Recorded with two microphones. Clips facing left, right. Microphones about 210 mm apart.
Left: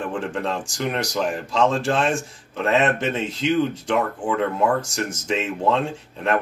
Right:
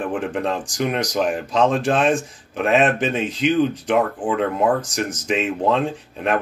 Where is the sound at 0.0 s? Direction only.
15° right (ahead or behind).